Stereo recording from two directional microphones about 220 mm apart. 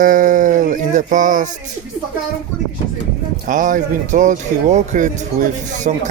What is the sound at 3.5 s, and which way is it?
Speech, 35° right (ahead or behind).